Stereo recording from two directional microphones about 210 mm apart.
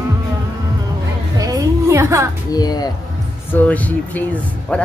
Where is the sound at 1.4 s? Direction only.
15° right (ahead or behind).